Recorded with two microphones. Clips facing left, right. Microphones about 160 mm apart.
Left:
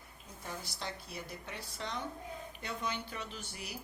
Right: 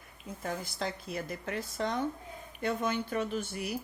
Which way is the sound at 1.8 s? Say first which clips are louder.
Right 7 dB; 50° right (ahead or behind).